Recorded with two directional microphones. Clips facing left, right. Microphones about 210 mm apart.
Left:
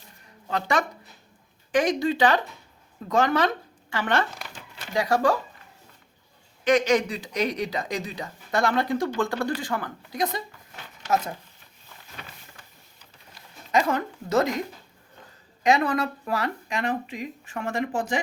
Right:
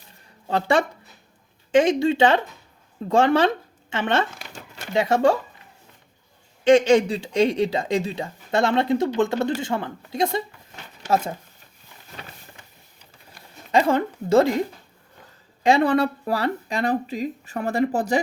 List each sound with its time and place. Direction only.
0.4 s speech: 30° right (ahead or behind)
6.7 s speech: 30° right (ahead or behind)
13.7 s speech: 30° right (ahead or behind)
15.6 s speech: 30° right (ahead or behind)